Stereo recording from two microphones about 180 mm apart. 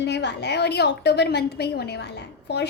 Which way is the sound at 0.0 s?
70° left (ahead or behind).